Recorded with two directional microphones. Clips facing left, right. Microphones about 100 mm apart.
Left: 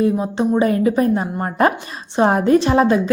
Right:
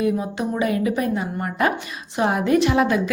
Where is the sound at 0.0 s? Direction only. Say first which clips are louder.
Left 5 dB; 30° left (ahead or behind).